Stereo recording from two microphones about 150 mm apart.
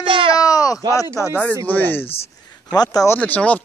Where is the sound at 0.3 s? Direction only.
25° left (ahead or behind).